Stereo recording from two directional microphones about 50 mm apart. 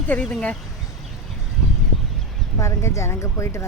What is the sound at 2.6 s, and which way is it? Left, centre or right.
Speech, left.